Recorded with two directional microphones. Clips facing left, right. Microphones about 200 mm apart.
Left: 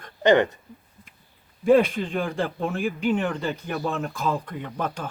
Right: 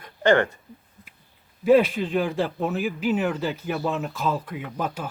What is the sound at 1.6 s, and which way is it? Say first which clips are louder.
Speech: even; 5° right (ahead or behind).